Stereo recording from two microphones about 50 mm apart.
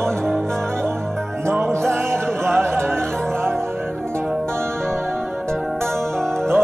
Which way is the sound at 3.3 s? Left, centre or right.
Right.